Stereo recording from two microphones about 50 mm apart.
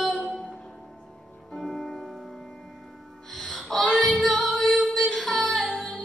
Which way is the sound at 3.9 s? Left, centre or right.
Centre.